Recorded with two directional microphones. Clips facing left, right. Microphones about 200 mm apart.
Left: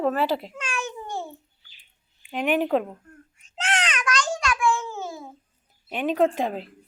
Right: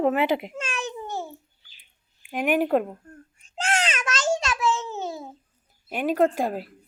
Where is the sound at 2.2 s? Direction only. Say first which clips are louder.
Right 1 dB; 10° right (ahead or behind).